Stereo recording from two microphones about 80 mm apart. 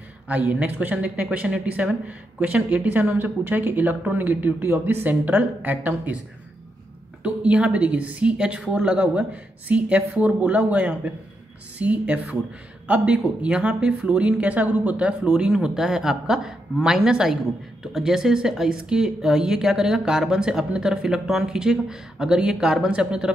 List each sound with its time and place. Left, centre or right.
0.3 s speech: centre
7.2 s speech: centre